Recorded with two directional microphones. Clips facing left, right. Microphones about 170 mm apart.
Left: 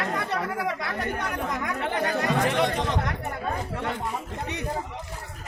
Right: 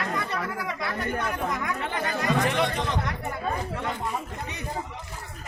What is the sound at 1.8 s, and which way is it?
Chatter, 60° left (ahead or behind).